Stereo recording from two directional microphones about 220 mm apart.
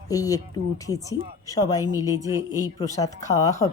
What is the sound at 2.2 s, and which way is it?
Speech, 15° right (ahead or behind).